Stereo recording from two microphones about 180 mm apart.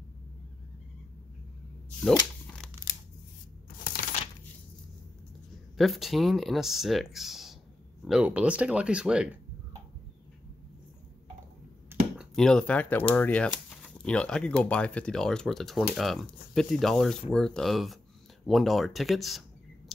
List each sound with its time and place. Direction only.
2.1 s shuffling cards: 5° left (ahead or behind)
3.8 s a sound: 45° left (ahead or behind)
5.8 s speech: centre (ahead or behind)
12.2 s speech: 5° left (ahead or behind)